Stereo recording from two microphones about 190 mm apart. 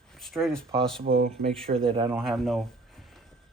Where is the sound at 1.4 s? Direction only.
30° right (ahead or behind).